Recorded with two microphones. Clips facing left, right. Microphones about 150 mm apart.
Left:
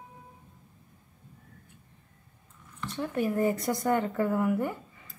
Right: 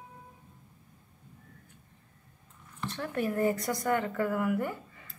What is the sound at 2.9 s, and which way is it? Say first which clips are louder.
Speech: left 3 dB; 15° left (ahead or behind).